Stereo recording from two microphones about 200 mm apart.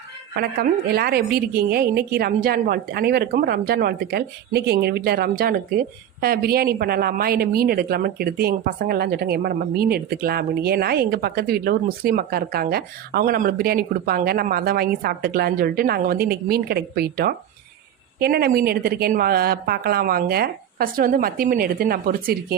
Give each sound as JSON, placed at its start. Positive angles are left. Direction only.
{"t": 0.3, "sound": "a woman's voice", "side_deg": -50}